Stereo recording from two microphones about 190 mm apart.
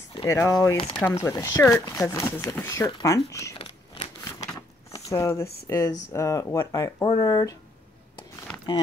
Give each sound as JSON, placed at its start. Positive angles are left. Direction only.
{"t": 0.2, "sound": "speech", "side_deg": 15}
{"t": 3.5, "sound": "biting", "side_deg": 30}
{"t": 4.6, "sound": "a sound", "side_deg": 15}
{"t": 5.7, "sound": "speech", "side_deg": 15}
{"t": 8.7, "sound": "speech", "side_deg": 20}